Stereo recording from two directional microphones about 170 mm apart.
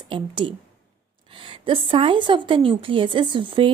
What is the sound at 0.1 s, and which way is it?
A woman's voice, 30° right (ahead or behind).